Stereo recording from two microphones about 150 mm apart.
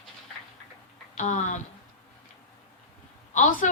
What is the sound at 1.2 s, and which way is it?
Speech, 55° left (ahead or behind).